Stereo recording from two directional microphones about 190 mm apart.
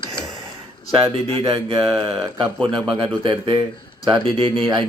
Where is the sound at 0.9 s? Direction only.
30° right (ahead or behind).